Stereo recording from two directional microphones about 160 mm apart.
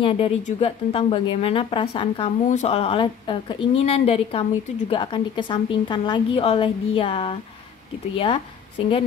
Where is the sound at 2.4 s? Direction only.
45° left (ahead or behind).